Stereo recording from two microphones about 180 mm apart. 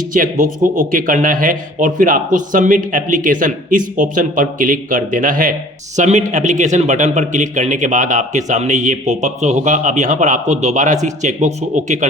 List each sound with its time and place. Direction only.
0.1 s a man's voice: 50° right (ahead or behind)